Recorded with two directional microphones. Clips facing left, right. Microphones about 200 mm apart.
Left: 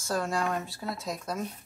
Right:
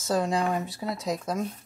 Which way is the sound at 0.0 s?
20° right (ahead or behind).